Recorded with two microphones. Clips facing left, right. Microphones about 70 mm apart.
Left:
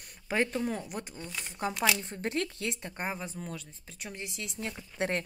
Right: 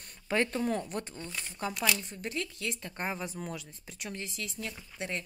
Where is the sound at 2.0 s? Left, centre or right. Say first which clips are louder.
Left 4 dB; left.